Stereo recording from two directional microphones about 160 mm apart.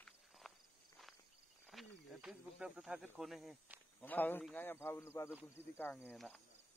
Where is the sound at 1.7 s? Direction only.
Centre (ahead or behind).